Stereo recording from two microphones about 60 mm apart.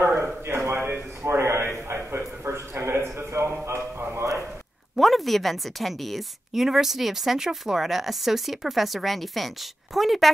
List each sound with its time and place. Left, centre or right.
0.0 s a sound: right
3.6 s music: right
4.9 s a woman's voice: centre